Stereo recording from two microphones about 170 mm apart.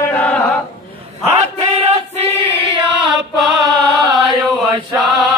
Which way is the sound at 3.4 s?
Centre (ahead or behind).